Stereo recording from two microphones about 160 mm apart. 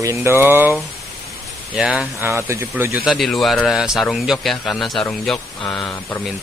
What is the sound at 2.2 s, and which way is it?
Speech, 15° right (ahead or behind).